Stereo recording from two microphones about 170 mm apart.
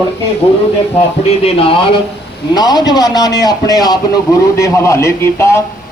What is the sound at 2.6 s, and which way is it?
A man's voice, 25° left (ahead or behind).